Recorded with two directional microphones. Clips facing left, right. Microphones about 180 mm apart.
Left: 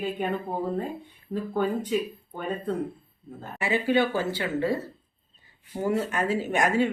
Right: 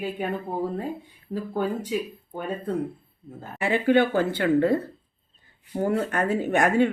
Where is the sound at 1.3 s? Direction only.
10° right (ahead or behind).